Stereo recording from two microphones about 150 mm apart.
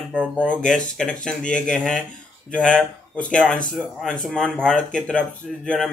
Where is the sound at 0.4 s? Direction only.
5° left (ahead or behind).